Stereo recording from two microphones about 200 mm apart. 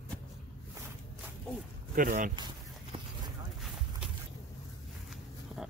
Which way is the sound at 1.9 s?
40° right (ahead or behind).